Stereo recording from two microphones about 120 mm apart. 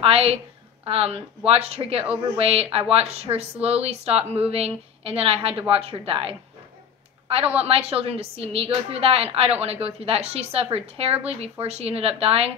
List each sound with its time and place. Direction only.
0.0 s a woman's voice: 55° right (ahead or behind)